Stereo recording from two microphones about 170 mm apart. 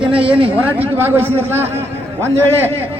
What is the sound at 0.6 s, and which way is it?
A man's voice, 10° right (ahead or behind).